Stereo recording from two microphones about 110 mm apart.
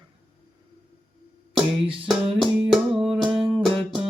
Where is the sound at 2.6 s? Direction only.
5° right (ahead or behind).